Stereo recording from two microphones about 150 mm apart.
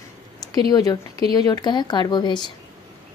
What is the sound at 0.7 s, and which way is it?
Speech, 25° left (ahead or behind).